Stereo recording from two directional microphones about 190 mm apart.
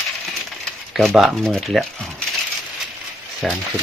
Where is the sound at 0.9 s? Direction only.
Centre (ahead or behind).